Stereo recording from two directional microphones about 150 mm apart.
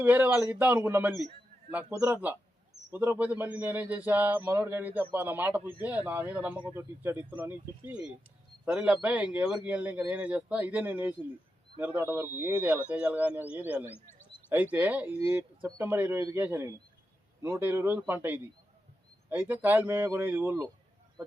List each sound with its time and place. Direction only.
0.0 s a man's voice: 10° right (ahead or behind)
13.9 s speech: 15° left (ahead or behind)
14.5 s a man's voice: 10° right (ahead or behind)